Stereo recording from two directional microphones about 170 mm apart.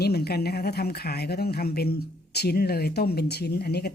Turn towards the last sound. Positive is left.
turn(degrees=70)  # may be behind; listen again after turning